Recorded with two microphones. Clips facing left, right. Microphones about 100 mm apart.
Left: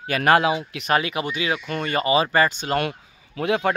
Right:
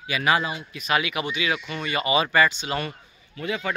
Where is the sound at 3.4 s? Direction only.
65° left (ahead or behind).